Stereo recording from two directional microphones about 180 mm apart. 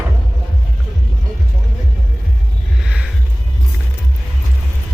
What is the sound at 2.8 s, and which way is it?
Music, 5° right (ahead or behind).